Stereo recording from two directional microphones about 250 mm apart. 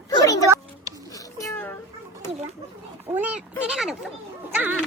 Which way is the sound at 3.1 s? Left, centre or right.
Centre.